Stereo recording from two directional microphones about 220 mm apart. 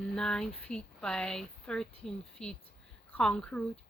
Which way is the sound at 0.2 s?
5° left (ahead or behind).